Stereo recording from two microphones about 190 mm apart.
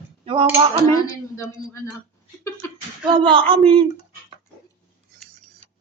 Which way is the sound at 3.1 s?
25° right (ahead or behind).